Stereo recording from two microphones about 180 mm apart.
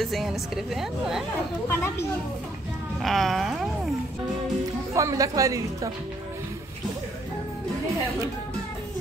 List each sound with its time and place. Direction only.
0.0 s a woman's voice: centre (ahead or behind)
1.7 s speech: 10° left (ahead or behind)
3.0 s a woman's voice: centre (ahead or behind)
4.9 s a woman's voice: 20° right (ahead or behind)